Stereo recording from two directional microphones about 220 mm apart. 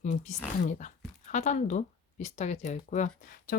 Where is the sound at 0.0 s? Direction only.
35° left (ahead or behind).